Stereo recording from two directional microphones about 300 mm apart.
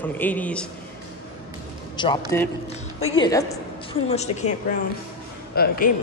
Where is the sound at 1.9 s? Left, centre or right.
Centre.